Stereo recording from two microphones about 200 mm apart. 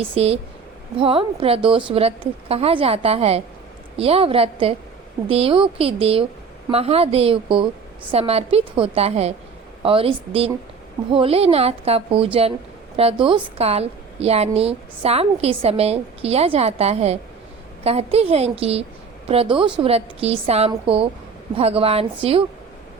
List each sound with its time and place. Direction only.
0.0 s a woman's voice: 30° right (ahead or behind)